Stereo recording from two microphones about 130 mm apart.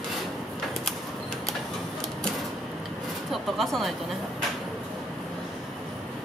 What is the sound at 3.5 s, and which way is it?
Speech, centre (ahead or behind).